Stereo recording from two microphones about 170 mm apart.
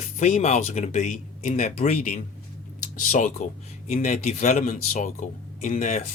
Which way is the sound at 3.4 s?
45° left (ahead or behind).